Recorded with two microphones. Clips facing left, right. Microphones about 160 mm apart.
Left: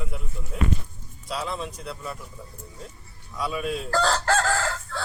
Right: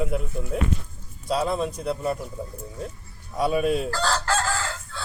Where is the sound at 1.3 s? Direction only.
45° right (ahead or behind).